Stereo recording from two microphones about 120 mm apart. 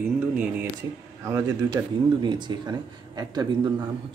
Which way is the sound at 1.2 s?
25° right (ahead or behind).